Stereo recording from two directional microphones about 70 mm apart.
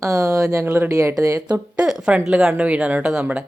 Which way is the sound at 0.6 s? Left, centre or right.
Right.